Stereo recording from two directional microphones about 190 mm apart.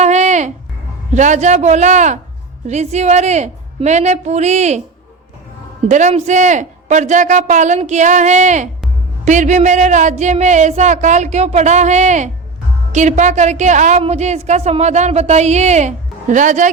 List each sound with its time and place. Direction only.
0.0 s a sound: 35° right (ahead or behind)
1.1 s a woman's voice: 40° right (ahead or behind)
5.9 s a woman's voice: 35° right (ahead or behind)